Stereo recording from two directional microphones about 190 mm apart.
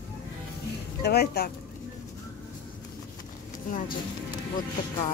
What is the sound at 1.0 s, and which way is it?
Speech, 55° left (ahead or behind).